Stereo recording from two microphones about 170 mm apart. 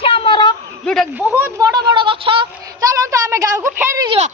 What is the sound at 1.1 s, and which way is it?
Speech, 10° right (ahead or behind).